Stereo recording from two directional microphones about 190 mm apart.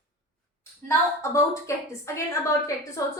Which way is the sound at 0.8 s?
15° left (ahead or behind).